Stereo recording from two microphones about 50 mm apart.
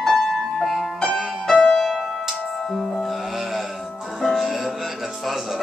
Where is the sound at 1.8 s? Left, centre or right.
Centre.